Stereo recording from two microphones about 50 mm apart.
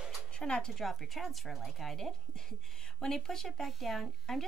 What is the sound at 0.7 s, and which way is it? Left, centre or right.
Speech, centre.